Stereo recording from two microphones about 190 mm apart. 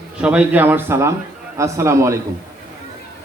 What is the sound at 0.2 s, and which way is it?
A man's voice, 5° right (ahead or behind).